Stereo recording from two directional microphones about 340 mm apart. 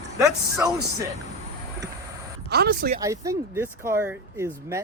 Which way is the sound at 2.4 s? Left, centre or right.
Right.